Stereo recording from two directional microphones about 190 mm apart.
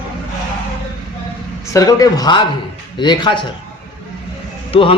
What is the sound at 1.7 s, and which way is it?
A man's voice, 20° left (ahead or behind).